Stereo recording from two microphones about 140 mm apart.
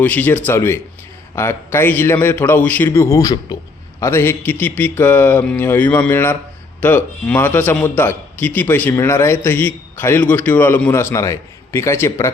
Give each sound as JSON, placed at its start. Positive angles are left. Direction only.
{"t": 0.0, "sound": "a man's voice", "side_deg": 10}